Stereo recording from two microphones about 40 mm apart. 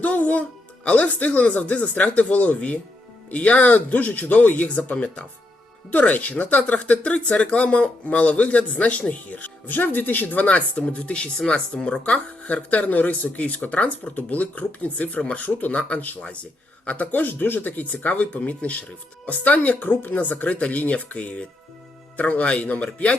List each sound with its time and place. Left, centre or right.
0.0 s speech: left
10.4 s speech: left
15.4 s speech: left
17.1 s speech: left